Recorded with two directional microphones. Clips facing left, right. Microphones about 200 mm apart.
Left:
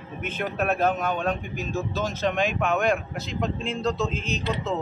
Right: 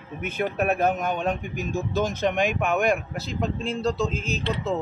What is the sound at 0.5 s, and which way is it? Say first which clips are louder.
A man's voice: even; 15° right (ahead or behind).